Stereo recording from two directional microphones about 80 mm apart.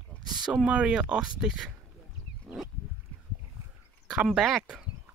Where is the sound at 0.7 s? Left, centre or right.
Centre.